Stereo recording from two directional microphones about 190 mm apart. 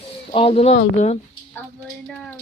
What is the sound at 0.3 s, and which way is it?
Speech, 30° left (ahead or behind).